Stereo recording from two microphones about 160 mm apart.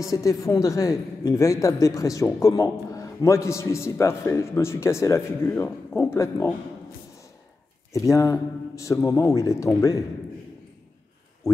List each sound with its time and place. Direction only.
0.0 s a woman's voice: 20° left (ahead or behind)
8.1 s a man's voice: 20° left (ahead or behind)